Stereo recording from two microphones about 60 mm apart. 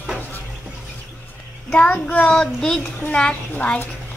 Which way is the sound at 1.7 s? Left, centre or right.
Left.